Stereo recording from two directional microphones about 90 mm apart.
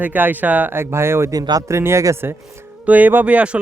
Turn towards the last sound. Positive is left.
turn(degrees=-15)  # may be behind; listen again after turning